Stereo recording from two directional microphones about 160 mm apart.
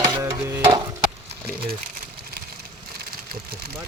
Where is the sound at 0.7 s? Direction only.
20° right (ahead or behind).